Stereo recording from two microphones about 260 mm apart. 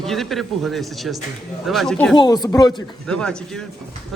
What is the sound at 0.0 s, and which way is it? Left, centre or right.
Speech, centre.